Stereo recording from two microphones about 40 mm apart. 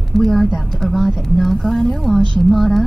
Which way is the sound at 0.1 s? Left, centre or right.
Centre.